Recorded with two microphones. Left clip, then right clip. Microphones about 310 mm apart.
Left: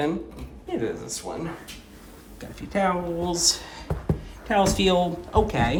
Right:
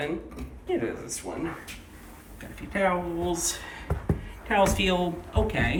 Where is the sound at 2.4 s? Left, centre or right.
Centre.